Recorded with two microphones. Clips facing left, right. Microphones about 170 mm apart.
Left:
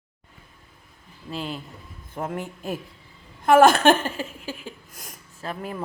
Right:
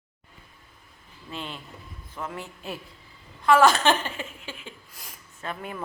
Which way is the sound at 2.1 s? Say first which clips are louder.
Left 6 dB; 50° left (ahead or behind).